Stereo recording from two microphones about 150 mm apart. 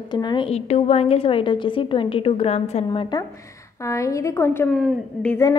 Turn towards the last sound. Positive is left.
turn(degrees=5)  # may be behind; listen again after turning